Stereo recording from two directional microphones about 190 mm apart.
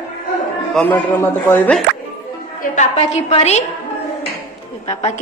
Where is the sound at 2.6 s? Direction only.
40° left (ahead or behind).